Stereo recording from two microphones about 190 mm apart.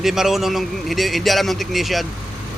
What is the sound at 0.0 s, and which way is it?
Speech, centre (ahead or behind).